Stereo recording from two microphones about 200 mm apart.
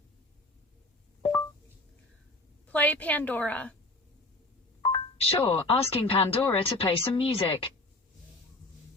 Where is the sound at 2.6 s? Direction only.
5° left (ahead or behind).